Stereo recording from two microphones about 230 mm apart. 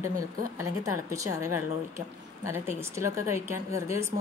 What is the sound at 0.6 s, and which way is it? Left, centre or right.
Speech, centre.